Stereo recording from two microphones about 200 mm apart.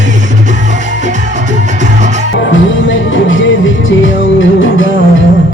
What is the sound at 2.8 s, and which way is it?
Music, 70° left (ahead or behind).